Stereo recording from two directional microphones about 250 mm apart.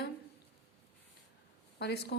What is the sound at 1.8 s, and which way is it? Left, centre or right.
Speech, left.